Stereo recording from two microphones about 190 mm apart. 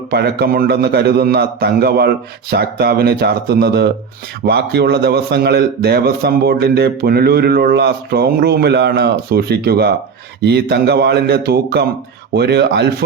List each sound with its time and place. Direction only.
0.1 s a man's voice: 55° right (ahead or behind)